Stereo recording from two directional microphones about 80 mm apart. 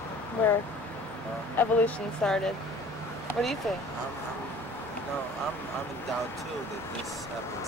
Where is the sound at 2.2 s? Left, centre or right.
Centre.